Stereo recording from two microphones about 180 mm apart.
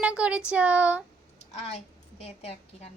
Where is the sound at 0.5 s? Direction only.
5° right (ahead or behind).